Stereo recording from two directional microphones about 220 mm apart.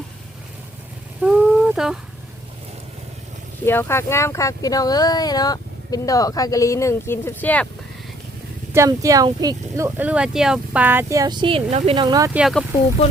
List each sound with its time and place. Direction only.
1.2 s a sound: 5° right (ahead or behind)
3.7 s speech: 10° left (ahead or behind)
8.7 s speech: 15° right (ahead or behind)
12.4 s speech: centre (ahead or behind)